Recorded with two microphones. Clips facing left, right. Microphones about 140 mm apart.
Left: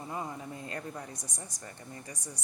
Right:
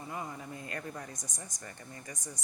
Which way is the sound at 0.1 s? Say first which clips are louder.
Left 2 dB; 25° left (ahead or behind).